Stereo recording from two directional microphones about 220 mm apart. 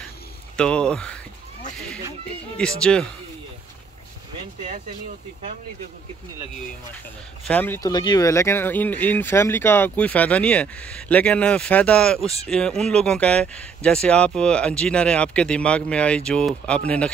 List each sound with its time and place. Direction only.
0.6 s speech: 5° left (ahead or behind)
2.5 s speech: 5° left (ahead or behind)
7.4 s speech: 10° left (ahead or behind)